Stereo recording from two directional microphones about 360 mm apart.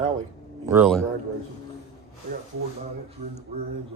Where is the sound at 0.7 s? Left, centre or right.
Centre.